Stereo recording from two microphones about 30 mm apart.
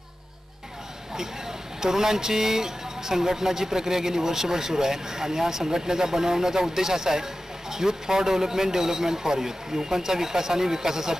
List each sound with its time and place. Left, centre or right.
1.8 s speech: centre